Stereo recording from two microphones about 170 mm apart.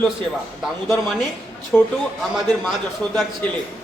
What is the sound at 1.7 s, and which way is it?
Speech, 5° left (ahead or behind).